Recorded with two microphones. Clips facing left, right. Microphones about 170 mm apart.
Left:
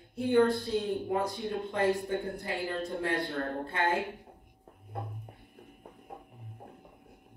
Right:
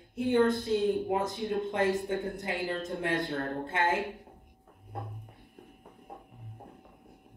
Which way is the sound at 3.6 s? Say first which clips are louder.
Right 2 dB; 20° right (ahead or behind).